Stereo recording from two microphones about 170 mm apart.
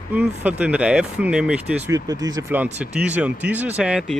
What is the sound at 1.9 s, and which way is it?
Speech, 20° right (ahead or behind).